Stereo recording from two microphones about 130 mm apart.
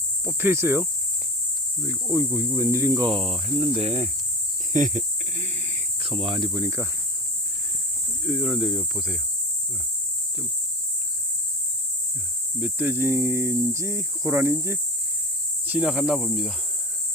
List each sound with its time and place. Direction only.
0.3 s speech: 15° right (ahead or behind)
3.1 s cricket: 45° right (ahead or behind)
3.8 s cricket: 55° right (ahead or behind)
4.7 s snake: 70° right (ahead or behind)
6.0 s cricket: 45° right (ahead or behind)
6.5 s speech: 20° right (ahead or behind)
8.3 s speech: 5° right (ahead or behind)
12.5 s speech: 10° right (ahead or behind)
15.6 s speech: 10° right (ahead or behind)